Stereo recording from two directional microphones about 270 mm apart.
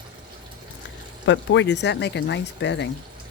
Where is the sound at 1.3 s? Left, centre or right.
Left.